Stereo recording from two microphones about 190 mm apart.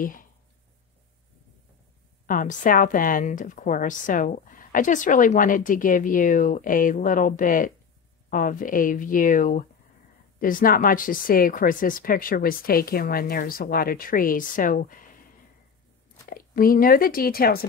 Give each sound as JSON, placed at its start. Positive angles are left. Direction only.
{"t": 0.0, "sound": "speech", "side_deg": 45}
{"t": 2.2, "sound": "a woman's voice", "side_deg": 45}
{"t": 16.3, "sound": "speech", "side_deg": 50}